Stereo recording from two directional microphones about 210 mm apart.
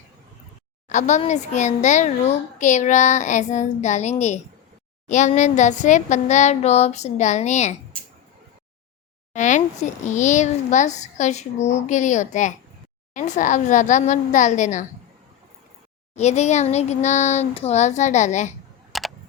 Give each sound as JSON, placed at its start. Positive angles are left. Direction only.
{"t": 0.9, "sound": "a child's voice", "side_deg": 35}
{"t": 9.3, "sound": "a child's voice", "side_deg": 35}
{"t": 16.1, "sound": "a child's voice", "side_deg": 30}
{"t": 18.9, "sound": "a sound", "side_deg": 0}